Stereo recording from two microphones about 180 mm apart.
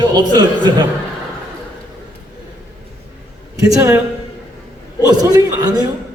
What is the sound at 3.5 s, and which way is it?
Speech, 15° right (ahead or behind).